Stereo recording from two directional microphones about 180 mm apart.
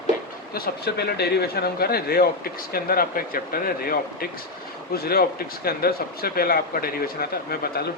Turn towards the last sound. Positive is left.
turn(degrees=60)  # may be behind; listen again after turning